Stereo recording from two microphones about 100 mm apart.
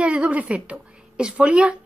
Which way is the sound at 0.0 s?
10° right (ahead or behind).